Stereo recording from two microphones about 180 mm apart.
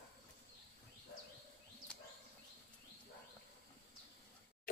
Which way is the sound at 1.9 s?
5° left (ahead or behind).